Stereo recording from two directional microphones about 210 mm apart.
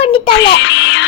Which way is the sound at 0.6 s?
60° left (ahead or behind).